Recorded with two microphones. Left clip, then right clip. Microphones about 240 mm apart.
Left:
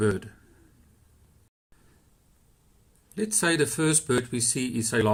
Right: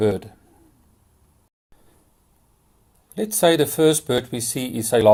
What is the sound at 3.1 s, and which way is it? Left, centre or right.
Speech, centre.